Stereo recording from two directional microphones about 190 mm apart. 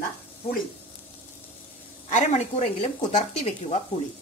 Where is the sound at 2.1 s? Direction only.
35° left (ahead or behind).